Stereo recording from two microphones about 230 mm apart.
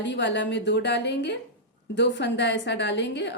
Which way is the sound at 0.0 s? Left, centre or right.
Left.